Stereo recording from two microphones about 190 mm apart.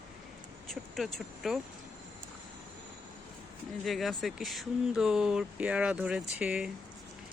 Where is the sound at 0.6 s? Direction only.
Centre (ahead or behind).